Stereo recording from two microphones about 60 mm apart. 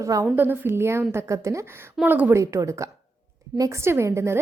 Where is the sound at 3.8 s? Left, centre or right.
Right.